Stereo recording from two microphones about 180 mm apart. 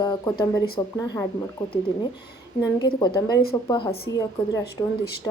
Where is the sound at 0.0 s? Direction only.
25° left (ahead or behind).